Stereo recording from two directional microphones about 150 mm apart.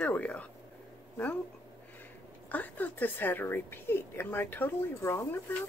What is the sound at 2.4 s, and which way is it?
A woman's voice, 10° left (ahead or behind).